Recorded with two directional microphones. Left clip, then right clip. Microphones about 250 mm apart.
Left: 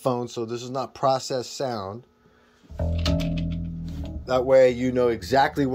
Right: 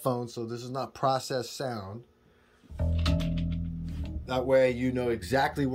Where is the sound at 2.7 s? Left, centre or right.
Left.